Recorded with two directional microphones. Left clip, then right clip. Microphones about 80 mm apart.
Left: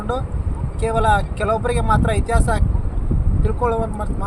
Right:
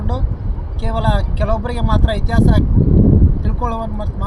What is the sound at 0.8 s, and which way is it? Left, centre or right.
Speech, left.